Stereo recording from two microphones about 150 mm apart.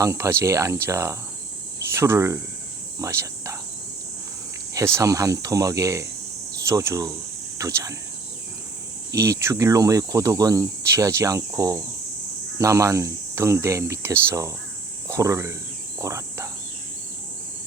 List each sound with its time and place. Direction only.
0.0 s speech: 20° right (ahead or behind)
3.0 s cricket: 20° right (ahead or behind)
4.7 s speech: 20° right (ahead or behind)
9.1 s speech: 20° right (ahead or behind)
16.0 s cricket: 20° right (ahead or behind)